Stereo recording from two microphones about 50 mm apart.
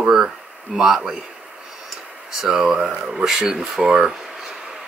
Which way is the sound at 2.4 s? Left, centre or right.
Centre.